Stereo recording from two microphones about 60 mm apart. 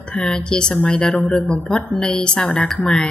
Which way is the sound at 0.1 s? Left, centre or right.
Centre.